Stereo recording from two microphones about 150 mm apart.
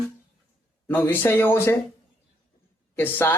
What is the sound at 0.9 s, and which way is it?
Speech, 15° left (ahead or behind).